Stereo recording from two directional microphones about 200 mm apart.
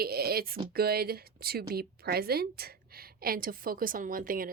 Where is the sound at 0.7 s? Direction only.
50° right (ahead or behind).